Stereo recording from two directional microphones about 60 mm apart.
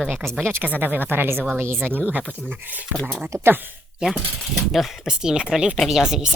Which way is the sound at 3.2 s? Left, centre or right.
Right.